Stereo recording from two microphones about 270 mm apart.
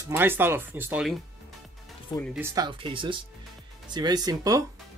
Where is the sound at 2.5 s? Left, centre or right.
Centre.